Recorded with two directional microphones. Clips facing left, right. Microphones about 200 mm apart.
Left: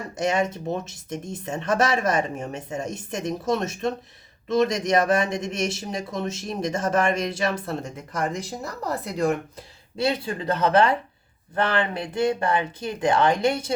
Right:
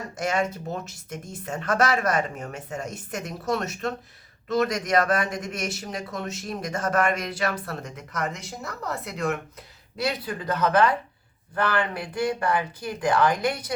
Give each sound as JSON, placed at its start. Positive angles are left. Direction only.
{"t": 0.2, "sound": "speech", "side_deg": 20}